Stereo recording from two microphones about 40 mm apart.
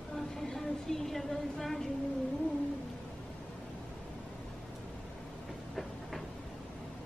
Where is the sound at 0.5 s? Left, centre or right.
Centre.